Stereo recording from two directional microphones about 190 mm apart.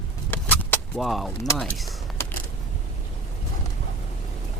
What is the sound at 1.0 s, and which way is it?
Speech, centre (ahead or behind).